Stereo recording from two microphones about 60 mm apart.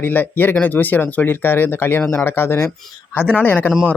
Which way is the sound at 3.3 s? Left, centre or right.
Left.